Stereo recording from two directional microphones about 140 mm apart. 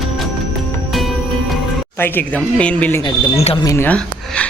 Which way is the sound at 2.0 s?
15° left (ahead or behind).